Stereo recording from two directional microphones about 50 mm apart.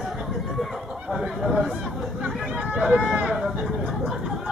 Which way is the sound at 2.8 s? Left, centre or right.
Centre.